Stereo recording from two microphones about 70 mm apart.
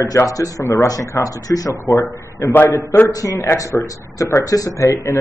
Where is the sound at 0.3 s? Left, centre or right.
Left.